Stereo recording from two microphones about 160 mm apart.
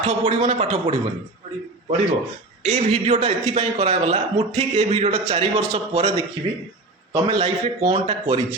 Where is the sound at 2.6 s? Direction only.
45° right (ahead or behind).